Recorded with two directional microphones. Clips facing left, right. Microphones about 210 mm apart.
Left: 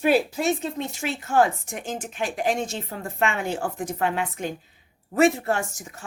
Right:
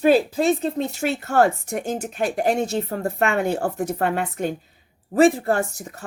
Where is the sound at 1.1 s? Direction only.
65° right (ahead or behind).